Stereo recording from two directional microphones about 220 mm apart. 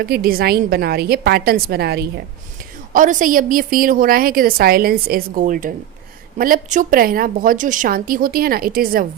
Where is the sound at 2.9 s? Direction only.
35° right (ahead or behind).